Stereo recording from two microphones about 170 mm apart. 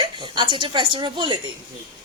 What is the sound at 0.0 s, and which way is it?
A woman's voice, 25° right (ahead or behind).